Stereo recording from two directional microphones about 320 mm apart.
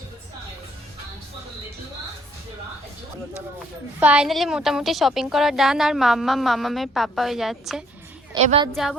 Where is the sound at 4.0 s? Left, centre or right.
Centre.